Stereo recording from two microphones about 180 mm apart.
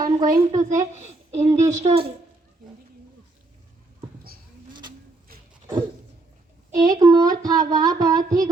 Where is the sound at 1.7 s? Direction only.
35° right (ahead or behind).